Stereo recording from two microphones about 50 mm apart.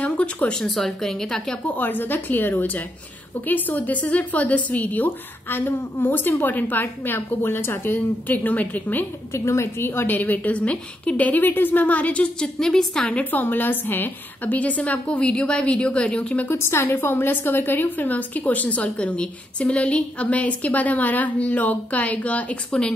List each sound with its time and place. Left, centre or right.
0.0 s a sound: left
0.5 s a woman's voice: centre
1.7 s a woman's voice: left
5.0 s a woman's voice: left
9.3 s a woman's voice: left
12.4 s a woman's voice: centre
13.1 s a woman's voice: left
16.5 s a woman's voice: left